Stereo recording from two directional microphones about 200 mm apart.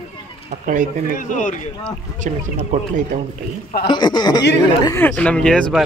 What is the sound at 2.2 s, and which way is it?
Speech, 40° right (ahead or behind).